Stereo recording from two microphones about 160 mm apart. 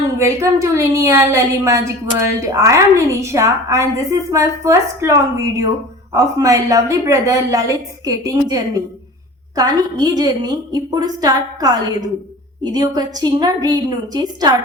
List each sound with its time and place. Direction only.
0.2 s a woman's voice: 15° right (ahead or behind)